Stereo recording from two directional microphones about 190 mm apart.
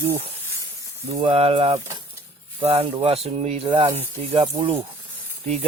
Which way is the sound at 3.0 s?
30° right (ahead or behind).